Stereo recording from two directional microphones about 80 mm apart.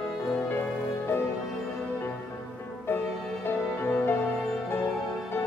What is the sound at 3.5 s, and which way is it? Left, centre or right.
Music, left.